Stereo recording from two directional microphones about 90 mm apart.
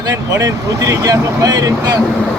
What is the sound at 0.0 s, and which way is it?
Speech, 45° right (ahead or behind).